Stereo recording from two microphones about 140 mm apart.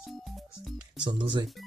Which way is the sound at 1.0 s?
35° right (ahead or behind).